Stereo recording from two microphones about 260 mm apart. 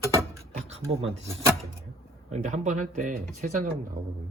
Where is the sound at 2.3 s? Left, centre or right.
Right.